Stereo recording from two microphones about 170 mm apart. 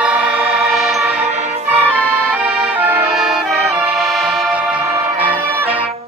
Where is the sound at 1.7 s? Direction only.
10° right (ahead or behind).